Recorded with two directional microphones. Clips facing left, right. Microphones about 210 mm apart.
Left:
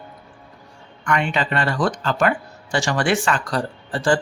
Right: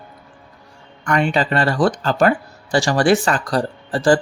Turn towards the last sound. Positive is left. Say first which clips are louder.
# right 4 dB
turn(degrees=-35)  # may be behind; listen again after turning